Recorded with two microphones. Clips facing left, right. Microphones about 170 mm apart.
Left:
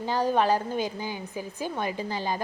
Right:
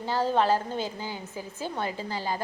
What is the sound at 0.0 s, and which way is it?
A woman's voice, 15° left (ahead or behind).